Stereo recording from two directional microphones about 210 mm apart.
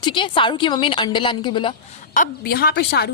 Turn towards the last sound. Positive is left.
turn(degrees=50)  # may be behind; listen again after turning